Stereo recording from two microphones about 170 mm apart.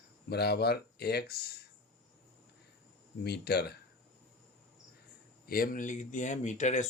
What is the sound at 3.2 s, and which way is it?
Speech, 70° left (ahead or behind).